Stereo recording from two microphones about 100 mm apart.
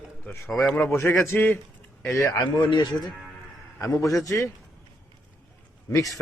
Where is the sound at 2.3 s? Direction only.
55° left (ahead or behind).